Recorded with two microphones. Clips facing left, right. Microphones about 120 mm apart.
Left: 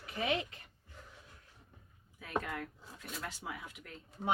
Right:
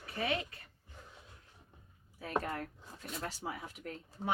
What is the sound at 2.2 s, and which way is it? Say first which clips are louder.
Speech: right 2 dB; 35° right (ahead or behind).